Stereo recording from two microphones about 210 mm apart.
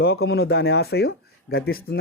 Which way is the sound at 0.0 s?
50° left (ahead or behind).